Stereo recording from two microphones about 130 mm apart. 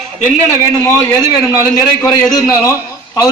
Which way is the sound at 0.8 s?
25° left (ahead or behind).